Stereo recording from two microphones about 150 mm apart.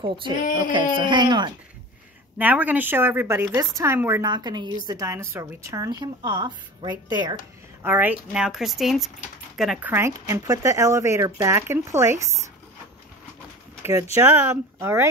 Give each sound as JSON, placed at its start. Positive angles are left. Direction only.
{"t": 0.0, "sound": "speech", "side_deg": -35}
{"t": 0.4, "sound": "a sound", "side_deg": 65}
{"t": 0.7, "sound": "speech", "side_deg": -30}
{"t": 2.3, "sound": "a woman's voice", "side_deg": -10}
{"t": 4.2, "sound": "a woman's voice", "side_deg": -30}
{"t": 7.8, "sound": "a woman's voice", "side_deg": -10}
{"t": 14.1, "sound": "a woman's voice", "side_deg": -15}